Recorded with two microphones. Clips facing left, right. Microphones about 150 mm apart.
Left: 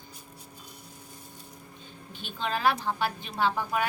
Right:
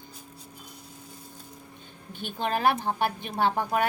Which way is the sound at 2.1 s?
55° right (ahead or behind).